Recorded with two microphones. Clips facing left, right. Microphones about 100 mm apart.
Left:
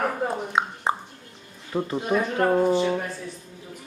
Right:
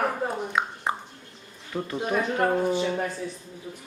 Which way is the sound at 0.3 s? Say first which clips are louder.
Left 2 dB; 30° left (ahead or behind).